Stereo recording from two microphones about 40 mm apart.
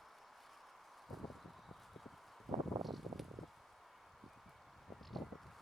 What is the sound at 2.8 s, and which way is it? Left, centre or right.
Wind, centre.